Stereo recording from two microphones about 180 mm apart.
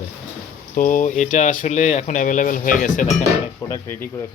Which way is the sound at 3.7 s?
15° left (ahead or behind).